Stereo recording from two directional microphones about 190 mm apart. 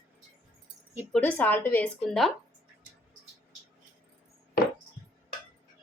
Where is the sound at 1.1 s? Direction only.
10° left (ahead or behind).